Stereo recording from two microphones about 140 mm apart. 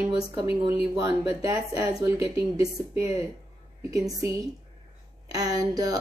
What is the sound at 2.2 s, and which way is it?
Speech, 40° left (ahead or behind).